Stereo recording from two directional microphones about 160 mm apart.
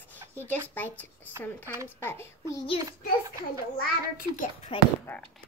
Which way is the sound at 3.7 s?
60° left (ahead or behind).